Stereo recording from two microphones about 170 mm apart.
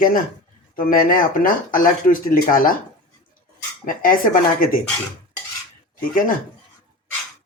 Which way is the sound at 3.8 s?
55° left (ahead or behind).